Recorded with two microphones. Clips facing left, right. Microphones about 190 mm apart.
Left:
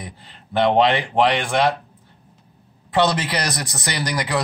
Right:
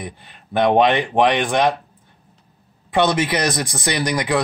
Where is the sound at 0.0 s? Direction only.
15° right (ahead or behind).